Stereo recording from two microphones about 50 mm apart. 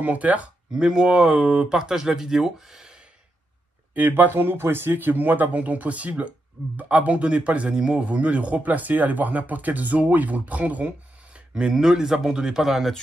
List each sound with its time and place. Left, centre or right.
0.0 s a man's voice: right
0.7 s speech: centre
3.9 s a man's voice: right
11.3 s speech: centre